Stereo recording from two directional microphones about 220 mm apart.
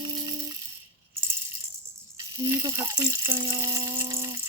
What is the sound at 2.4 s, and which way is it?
Speech, 15° right (ahead or behind).